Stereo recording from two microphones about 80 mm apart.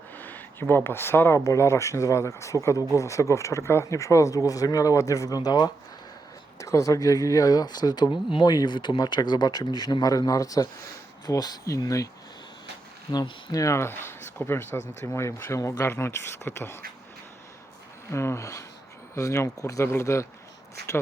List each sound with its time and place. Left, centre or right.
0.2 s a sound: left
0.9 s speech: left
6.6 s speech: left
8.5 s speech: left
13.1 s speech: left
18.1 s speech: left